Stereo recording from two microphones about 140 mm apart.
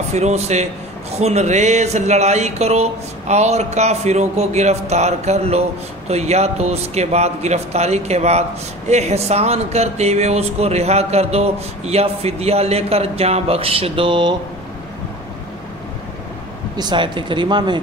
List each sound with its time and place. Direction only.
0.1 s a man's voice: 55° right (ahead or behind); by 14.3 s 35° right (ahead or behind)
16.7 s speech: 35° right (ahead or behind)